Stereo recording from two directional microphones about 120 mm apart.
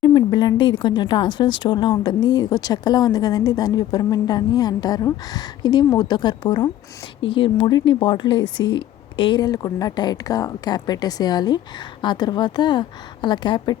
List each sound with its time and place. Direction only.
0.0 s speech: 40° left (ahead or behind)